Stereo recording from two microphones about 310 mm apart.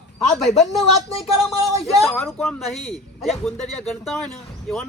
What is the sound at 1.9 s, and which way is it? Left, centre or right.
A man's voice, centre.